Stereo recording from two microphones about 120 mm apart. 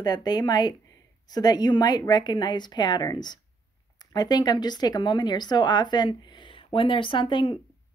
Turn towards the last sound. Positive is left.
turn(degrees=45)  # may be behind; listen again after turning